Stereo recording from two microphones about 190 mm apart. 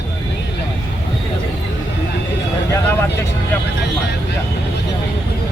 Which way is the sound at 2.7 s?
15° left (ahead or behind).